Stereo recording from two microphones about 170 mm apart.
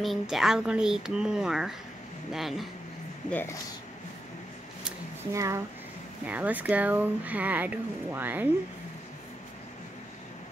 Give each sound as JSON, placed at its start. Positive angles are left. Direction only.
{"t": 0.0, "sound": "speech", "side_deg": 0}
{"t": 5.3, "sound": "speech", "side_deg": -20}